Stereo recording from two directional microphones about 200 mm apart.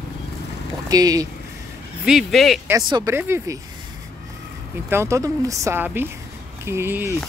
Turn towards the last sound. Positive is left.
turn(degrees=-10)  # may be behind; listen again after turning